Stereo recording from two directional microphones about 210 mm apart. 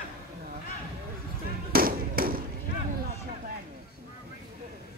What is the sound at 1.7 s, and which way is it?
Firecracker, 45° right (ahead or behind).